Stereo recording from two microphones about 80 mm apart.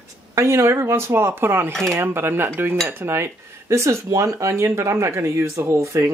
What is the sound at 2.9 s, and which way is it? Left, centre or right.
Speech, right.